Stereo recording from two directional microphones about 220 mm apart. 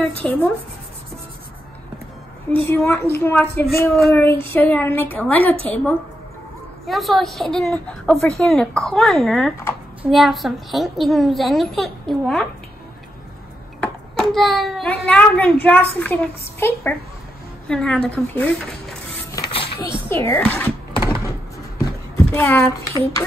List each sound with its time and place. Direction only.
0.2 s a woman's voice: 10° left (ahead or behind)
2.5 s a woman's voice: 10° left (ahead or behind)
6.9 s a woman's voice: centre (ahead or behind)
13.7 s a child's voice: centre (ahead or behind)
19.3 s music: 20° left (ahead or behind)
20.1 s a sound: 10° left (ahead or behind)
21.8 s speech: 10° left (ahead or behind)